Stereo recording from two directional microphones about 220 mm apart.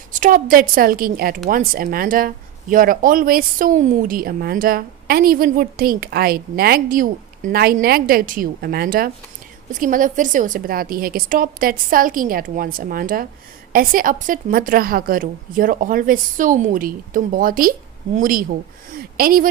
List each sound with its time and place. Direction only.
0.1 s speech: 35° right (ahead or behind)